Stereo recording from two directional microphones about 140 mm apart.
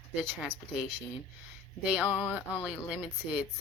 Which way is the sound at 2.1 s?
15° left (ahead or behind).